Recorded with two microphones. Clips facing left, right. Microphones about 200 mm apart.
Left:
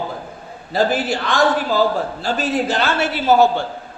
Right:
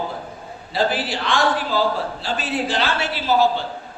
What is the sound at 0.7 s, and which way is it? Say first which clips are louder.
A man's voice: left 4 dB; 45° left (ahead or behind).